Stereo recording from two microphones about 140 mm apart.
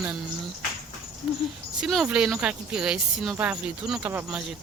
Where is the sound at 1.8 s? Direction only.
Centre (ahead or behind).